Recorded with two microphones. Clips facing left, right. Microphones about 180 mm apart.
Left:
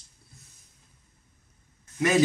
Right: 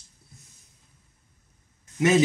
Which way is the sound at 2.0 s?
20° right (ahead or behind).